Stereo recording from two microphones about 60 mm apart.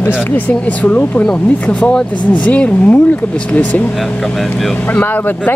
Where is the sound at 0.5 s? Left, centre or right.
Left.